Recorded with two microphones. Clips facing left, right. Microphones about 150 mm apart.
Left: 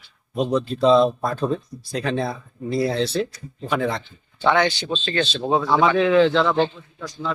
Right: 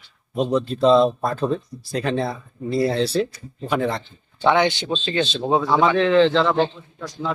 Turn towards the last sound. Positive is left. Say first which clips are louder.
# right 1 dB
turn(degrees=-5)  # may be behind; listen again after turning